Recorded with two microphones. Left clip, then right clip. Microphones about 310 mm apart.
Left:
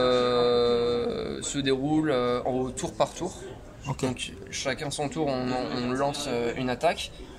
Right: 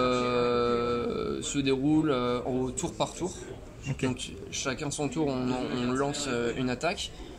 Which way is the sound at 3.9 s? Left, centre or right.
Left.